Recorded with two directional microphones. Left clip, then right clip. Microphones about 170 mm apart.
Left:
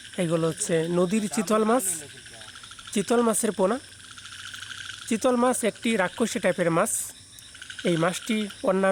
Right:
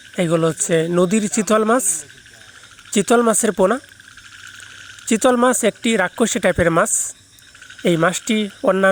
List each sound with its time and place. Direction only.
0.2 s speech: 25° right (ahead or behind)
2.9 s speech: 30° right (ahead or behind)
5.0 s speech: 30° right (ahead or behind)